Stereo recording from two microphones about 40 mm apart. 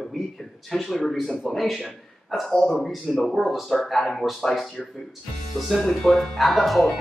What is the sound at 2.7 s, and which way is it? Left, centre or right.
Speech, centre.